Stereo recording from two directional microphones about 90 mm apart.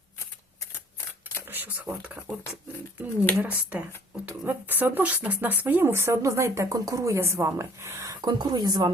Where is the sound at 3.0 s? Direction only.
20° right (ahead or behind).